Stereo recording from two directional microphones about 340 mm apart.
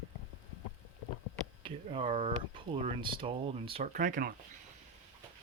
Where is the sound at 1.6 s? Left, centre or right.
Centre.